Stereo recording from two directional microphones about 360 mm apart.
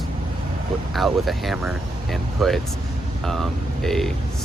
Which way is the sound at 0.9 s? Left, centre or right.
Centre.